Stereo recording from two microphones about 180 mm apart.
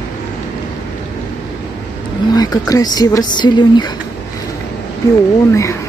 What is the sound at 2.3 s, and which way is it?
Speech, 20° left (ahead or behind).